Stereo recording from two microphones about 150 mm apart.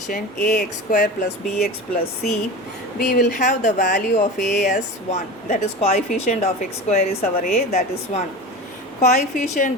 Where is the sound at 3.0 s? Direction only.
65° left (ahead or behind); by 8.2 s 45° left (ahead or behind).